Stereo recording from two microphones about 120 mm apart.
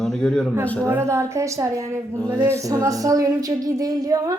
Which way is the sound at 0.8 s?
20° right (ahead or behind).